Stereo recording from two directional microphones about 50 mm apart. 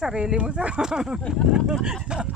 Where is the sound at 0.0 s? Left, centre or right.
Centre.